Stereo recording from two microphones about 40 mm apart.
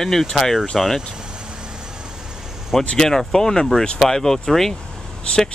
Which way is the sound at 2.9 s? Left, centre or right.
Centre.